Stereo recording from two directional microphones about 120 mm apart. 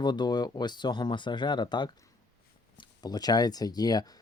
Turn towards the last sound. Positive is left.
turn(degrees=35)  # may be behind; listen again after turning